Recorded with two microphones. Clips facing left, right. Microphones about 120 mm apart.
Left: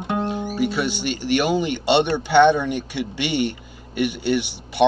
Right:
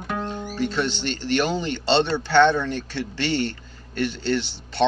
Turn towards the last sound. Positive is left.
turn(degrees=15)  # may be behind; listen again after turning